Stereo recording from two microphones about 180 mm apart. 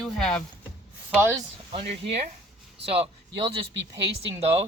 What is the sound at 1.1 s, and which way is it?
Speech, 15° right (ahead or behind).